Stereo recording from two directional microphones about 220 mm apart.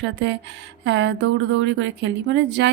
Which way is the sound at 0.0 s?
50° right (ahead or behind).